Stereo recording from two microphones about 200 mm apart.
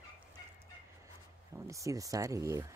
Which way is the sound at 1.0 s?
15° right (ahead or behind).